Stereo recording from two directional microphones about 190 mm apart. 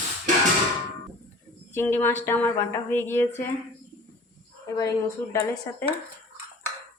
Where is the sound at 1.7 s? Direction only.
10° left (ahead or behind).